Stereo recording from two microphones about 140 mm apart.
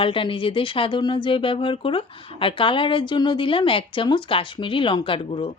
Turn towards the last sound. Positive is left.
turn(degrees=40)  # may be behind; listen again after turning